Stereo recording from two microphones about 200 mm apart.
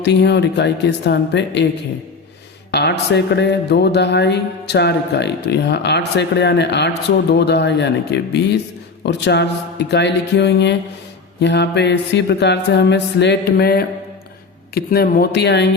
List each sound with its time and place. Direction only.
0.0 s speech: 55° left (ahead or behind)
2.7 s speech: 55° left (ahead or behind)